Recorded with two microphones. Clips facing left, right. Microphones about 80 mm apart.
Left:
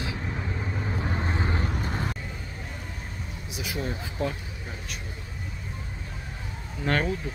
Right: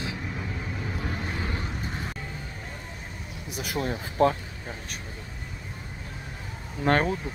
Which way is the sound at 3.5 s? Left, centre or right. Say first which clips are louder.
Right 3 dB; right.